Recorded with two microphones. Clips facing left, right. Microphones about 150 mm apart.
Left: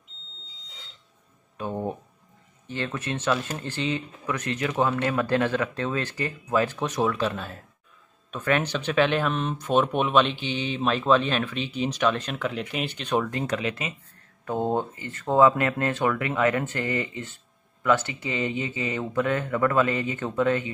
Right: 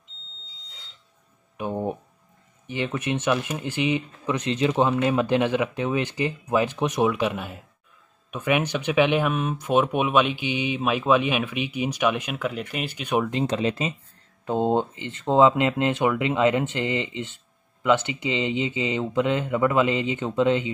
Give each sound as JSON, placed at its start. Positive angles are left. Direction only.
{"t": 1.6, "sound": "speech", "side_deg": -15}
{"t": 13.3, "sound": "speech", "side_deg": -25}